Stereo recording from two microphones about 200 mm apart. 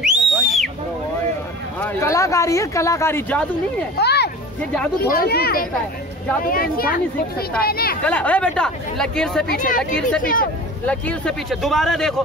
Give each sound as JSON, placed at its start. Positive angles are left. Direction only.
{"t": 0.0, "sound": "a sound", "side_deg": 0}
{"t": 1.8, "sound": "speech", "side_deg": 15}
{"t": 4.0, "sound": "a sound", "side_deg": 55}
{"t": 5.1, "sound": "speech", "side_deg": 50}
{"t": 8.0, "sound": "speech", "side_deg": 5}
{"t": 9.5, "sound": "speech", "side_deg": 40}
{"t": 10.9, "sound": "speech", "side_deg": 5}